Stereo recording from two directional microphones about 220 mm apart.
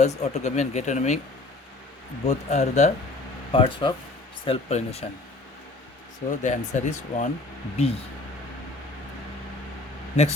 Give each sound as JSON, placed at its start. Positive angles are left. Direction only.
{"t": 0.0, "sound": "speech", "side_deg": 30}
{"t": 2.2, "sound": "speech", "side_deg": 30}
{"t": 3.5, "sound": "speech", "side_deg": 20}
{"t": 6.4, "sound": "speech", "side_deg": 35}